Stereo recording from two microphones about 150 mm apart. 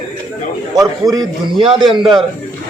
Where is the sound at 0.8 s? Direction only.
25° right (ahead or behind).